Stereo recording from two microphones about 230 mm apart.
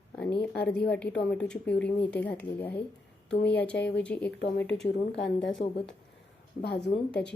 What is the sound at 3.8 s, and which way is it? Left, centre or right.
A woman's voice, left.